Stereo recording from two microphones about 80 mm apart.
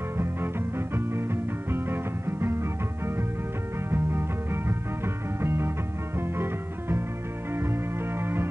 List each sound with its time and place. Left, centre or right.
0.2 s music: right